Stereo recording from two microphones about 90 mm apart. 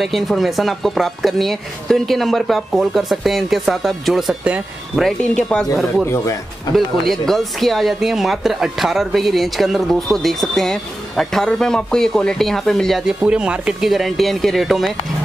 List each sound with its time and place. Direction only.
0.0 s speech: centre (ahead or behind)
5.3 s speech: 10° left (ahead or behind)
6.1 s speech: 35° left (ahead or behind)
6.7 s speech: 5° left (ahead or behind)